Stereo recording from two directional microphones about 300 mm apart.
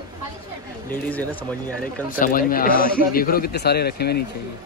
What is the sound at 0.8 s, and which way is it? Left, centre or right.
Speech, centre.